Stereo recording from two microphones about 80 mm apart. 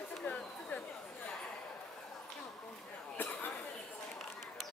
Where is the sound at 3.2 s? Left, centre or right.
Left.